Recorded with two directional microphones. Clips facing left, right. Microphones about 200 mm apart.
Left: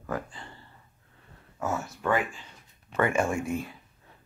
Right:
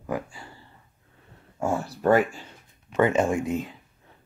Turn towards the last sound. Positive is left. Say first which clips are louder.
# right 4 dB
turn(degrees=-20)  # may be behind; listen again after turning